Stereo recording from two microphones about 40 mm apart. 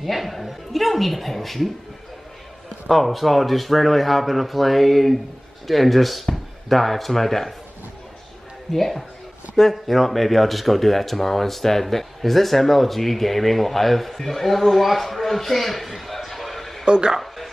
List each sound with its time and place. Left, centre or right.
0.0 s speech: centre
2.9 s speech: centre
8.7 s speech: centre
16.8 s speech: right